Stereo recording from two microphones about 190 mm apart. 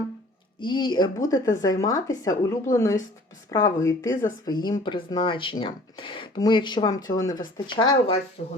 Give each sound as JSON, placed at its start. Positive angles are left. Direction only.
{"t": 0.6, "sound": "speech", "side_deg": 25}
{"t": 8.4, "sound": "speech", "side_deg": 40}